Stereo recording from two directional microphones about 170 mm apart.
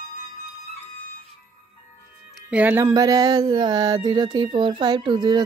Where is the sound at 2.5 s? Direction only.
10° right (ahead or behind).